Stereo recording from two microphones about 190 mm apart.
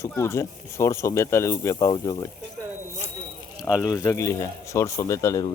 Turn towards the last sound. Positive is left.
turn(degrees=15)  # may be behind; listen again after turning